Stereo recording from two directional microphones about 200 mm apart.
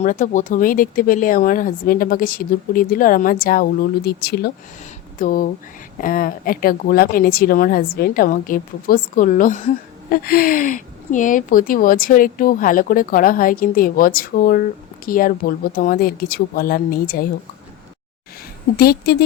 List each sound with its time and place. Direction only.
0.0 s a woman's voice: 40° left (ahead or behind)
18.8 s a woman's voice: 50° left (ahead or behind)